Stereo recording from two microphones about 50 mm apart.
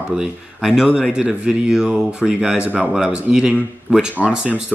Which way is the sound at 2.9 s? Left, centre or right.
Centre.